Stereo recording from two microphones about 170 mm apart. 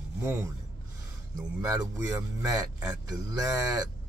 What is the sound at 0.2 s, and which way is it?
Filing, 15° right (ahead or behind).